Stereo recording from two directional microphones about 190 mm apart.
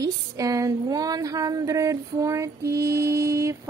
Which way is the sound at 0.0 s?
20° right (ahead or behind).